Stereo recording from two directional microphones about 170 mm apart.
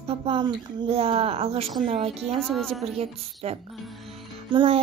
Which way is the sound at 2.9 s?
35° right (ahead or behind).